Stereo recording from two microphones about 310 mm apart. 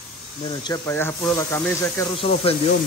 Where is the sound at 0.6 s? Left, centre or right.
Centre.